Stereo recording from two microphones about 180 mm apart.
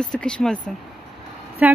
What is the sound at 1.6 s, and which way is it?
Speech, 10° right (ahead or behind).